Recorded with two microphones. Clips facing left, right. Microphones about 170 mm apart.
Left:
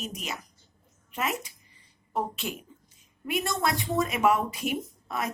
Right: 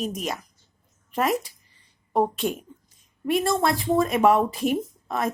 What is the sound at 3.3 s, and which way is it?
Speech, 30° right (ahead or behind).